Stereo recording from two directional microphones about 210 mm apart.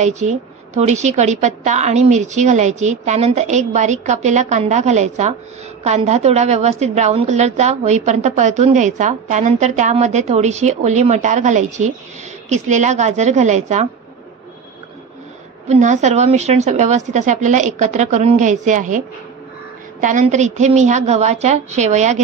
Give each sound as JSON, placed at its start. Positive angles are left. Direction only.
{"t": 0.0, "sound": "a woman's voice", "side_deg": -35}
{"t": 15.7, "sound": "a woman's voice", "side_deg": -35}